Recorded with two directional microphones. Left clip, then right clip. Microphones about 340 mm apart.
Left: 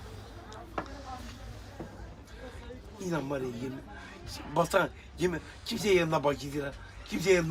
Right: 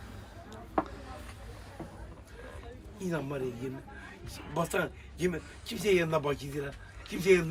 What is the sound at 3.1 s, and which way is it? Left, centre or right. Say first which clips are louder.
Speech: left 2 dB; centre.